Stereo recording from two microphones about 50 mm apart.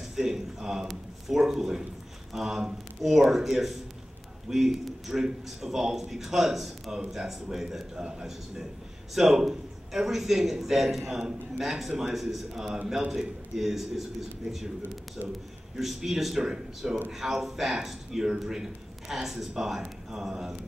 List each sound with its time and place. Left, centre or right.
0.0 s a man's voice: centre
15.8 s a man's voice: centre